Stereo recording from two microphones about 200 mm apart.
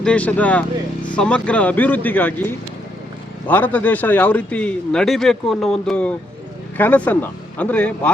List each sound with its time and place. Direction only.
0.0 s a man's voice: 5° left (ahead or behind)